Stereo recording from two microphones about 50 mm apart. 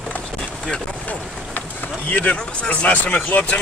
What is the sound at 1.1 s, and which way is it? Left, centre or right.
Speech, left.